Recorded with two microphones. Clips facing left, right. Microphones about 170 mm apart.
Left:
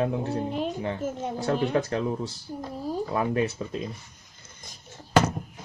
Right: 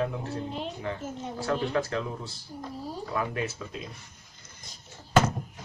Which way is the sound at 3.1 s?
30° left (ahead or behind).